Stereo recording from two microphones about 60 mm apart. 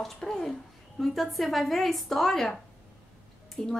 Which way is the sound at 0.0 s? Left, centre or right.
Centre.